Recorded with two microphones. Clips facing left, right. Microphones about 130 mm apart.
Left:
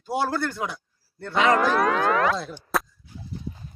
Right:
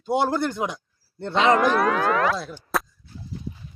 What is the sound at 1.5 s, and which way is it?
Speech, centre (ahead or behind).